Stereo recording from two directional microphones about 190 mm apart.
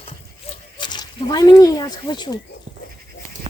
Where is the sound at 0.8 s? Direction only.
20° left (ahead or behind).